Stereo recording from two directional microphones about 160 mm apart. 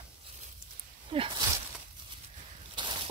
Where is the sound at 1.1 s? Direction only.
35° right (ahead or behind).